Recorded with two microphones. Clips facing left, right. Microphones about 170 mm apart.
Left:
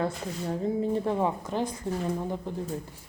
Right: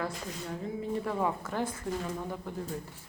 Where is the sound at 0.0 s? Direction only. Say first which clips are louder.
Left 6 dB; 35° left (ahead or behind).